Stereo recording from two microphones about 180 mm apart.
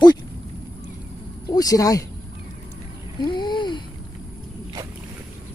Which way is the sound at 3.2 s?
25° left (ahead or behind).